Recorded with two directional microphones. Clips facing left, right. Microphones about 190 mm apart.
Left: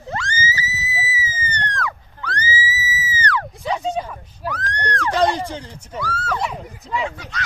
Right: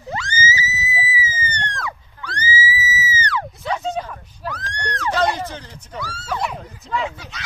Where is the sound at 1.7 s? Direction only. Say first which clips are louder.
Left 3 dB; 10° right (ahead or behind).